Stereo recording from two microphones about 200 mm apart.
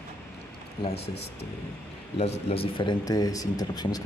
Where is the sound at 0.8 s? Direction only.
30° left (ahead or behind).